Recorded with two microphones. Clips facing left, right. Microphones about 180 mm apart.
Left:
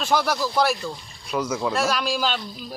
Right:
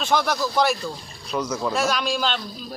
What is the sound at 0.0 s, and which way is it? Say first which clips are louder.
A man's voice: even; 10° left (ahead or behind).